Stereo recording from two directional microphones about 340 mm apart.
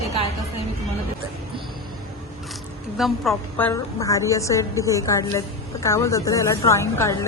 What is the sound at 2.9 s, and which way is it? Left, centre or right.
A woman's voice, centre.